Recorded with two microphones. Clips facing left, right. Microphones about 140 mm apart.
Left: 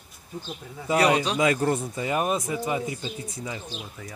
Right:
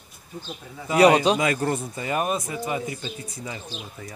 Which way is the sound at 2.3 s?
5° left (ahead or behind).